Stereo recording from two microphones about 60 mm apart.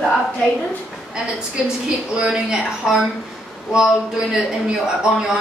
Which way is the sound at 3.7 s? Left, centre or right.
Centre.